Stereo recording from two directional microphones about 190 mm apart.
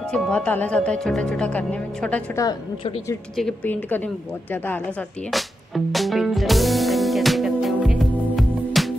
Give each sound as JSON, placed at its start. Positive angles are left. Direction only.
{"t": 0.1, "sound": "speech", "side_deg": 5}
{"t": 2.4, "sound": "a woman's voice", "side_deg": 20}
{"t": 3.3, "sound": "a woman's voice", "side_deg": 5}
{"t": 5.9, "sound": "music", "side_deg": 0}